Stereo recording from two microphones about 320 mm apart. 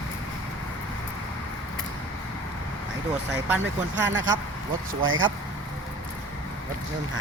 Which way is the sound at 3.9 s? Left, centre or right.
Right.